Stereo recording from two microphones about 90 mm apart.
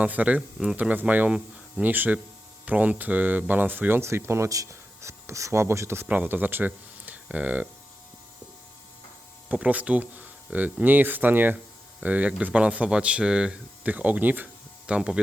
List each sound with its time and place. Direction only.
0.0 s speech: 15° right (ahead or behind)
6.1 s speech: 20° right (ahead or behind)
9.5 s speech: 15° right (ahead or behind)